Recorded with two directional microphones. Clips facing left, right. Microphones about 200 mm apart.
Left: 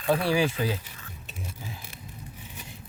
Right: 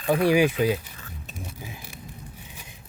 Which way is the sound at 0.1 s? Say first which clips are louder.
Right 4 dB; 15° right (ahead or behind).